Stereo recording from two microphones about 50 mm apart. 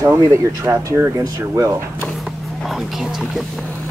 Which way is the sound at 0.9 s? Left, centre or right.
Right.